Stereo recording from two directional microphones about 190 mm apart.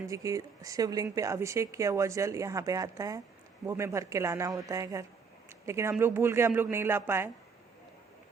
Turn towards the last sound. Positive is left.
turn(degrees=-10)  # may be behind; listen again after turning